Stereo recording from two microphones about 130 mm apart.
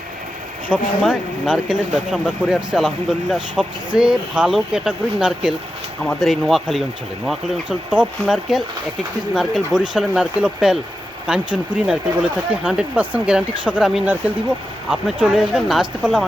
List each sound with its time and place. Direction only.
0.7 s speech: 5° right (ahead or behind)